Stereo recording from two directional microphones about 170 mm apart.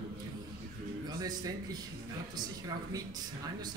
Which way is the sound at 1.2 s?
20° right (ahead or behind).